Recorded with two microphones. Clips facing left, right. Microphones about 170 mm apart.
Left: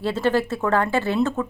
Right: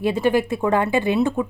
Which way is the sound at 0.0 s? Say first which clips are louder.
Right 2 dB; 15° right (ahead or behind).